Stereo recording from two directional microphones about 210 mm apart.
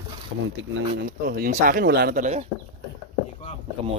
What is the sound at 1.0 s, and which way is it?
Speech, 45° right (ahead or behind).